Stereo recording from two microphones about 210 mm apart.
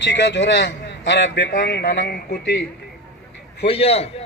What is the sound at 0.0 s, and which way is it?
A man's voice, 55° left (ahead or behind).